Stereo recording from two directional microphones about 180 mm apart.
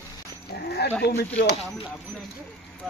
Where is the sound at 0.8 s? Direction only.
65° left (ahead or behind).